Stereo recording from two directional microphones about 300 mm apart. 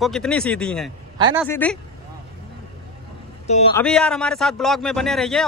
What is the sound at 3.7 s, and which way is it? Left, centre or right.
Speech, centre.